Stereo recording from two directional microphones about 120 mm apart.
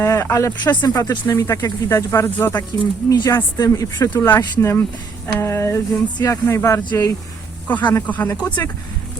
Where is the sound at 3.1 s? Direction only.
30° left (ahead or behind).